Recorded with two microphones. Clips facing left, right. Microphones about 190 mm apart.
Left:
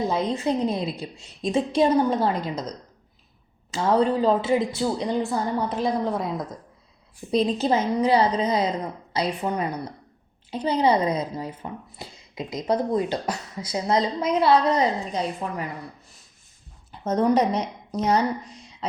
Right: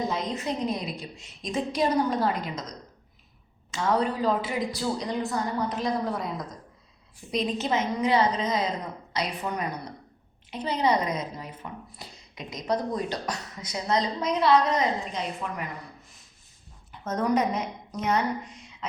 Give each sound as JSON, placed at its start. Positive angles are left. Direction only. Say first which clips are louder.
{"t": 0.1, "sound": "a woman's voice", "louder": "left 6 dB", "side_deg": 30}
{"t": 16.9, "sound": "a woman's voice", "louder": "left 5 dB", "side_deg": 30}